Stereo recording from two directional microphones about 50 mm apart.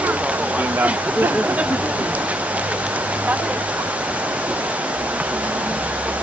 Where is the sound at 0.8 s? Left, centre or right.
Right.